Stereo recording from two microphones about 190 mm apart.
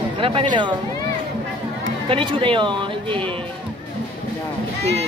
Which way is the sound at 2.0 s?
25° right (ahead or behind).